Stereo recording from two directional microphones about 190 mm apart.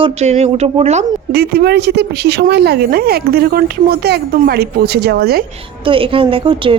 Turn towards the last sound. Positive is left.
turn(degrees=-25)  # may be behind; listen again after turning